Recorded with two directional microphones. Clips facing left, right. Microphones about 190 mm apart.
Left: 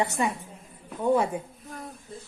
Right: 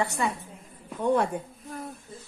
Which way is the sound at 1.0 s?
5° left (ahead or behind).